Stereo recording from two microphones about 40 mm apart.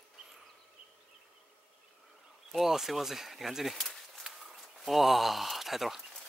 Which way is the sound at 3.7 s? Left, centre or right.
Centre.